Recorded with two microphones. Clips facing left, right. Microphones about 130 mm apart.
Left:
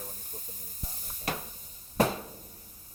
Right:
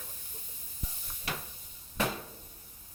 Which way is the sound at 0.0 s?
40° left (ahead or behind).